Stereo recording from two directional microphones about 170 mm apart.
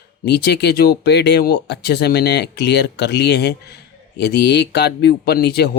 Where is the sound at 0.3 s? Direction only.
75° left (ahead or behind).